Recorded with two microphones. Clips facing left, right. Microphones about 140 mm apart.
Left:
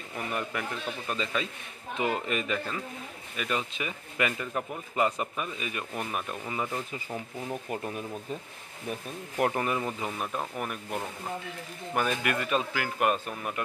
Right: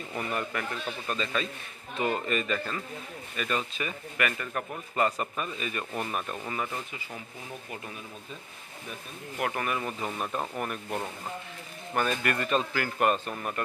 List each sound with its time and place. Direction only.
0.3 s speech: 10° left (ahead or behind)
9.4 s speech: 25° left (ahead or behind)
10.1 s speech: 5° left (ahead or behind)